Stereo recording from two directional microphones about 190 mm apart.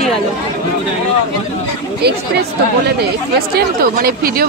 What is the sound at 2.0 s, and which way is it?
Speech, 60° right (ahead or behind).